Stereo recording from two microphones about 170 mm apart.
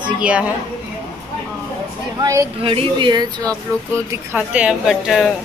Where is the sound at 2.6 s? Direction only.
30° right (ahead or behind).